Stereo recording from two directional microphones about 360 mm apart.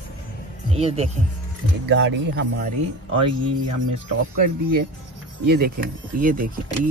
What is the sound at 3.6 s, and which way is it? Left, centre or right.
Speech, right.